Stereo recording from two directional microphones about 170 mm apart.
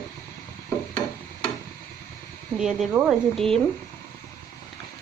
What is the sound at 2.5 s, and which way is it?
Speech, centre (ahead or behind).